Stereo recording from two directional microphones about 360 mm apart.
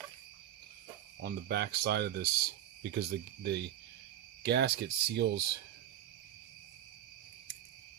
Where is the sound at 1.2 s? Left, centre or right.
Right.